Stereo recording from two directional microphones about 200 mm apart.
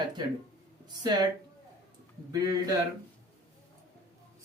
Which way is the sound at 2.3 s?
15° right (ahead or behind).